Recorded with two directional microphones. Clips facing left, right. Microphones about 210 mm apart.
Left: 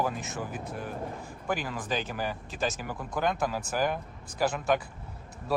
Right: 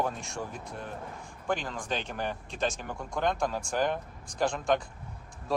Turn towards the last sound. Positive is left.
turn(degrees=5)  # may be behind; listen again after turning